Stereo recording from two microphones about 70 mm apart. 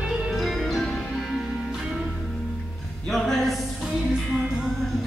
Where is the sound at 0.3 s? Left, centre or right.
Centre.